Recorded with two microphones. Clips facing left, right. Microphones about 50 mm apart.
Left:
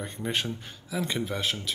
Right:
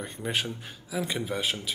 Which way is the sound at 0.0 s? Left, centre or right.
Centre.